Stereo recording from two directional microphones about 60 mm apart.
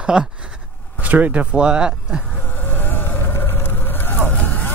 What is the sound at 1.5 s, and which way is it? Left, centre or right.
Speech, centre.